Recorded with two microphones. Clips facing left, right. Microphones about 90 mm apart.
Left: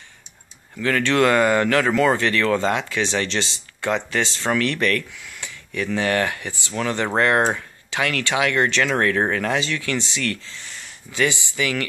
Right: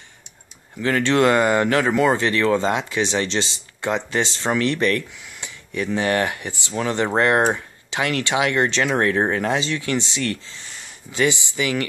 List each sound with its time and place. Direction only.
0.7 s speech: 25° right (ahead or behind)